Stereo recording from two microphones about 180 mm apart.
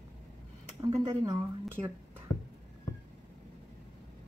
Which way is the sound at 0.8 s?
35° right (ahead or behind).